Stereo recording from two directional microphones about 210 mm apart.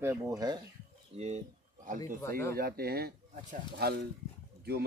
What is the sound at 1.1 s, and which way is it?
Speech, 30° right (ahead or behind).